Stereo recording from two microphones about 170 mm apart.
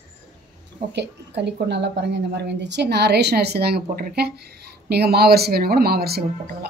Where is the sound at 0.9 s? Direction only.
90° right.